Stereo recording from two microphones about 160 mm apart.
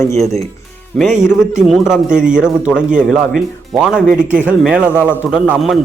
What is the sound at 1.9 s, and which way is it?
A man's voice, 5° right (ahead or behind).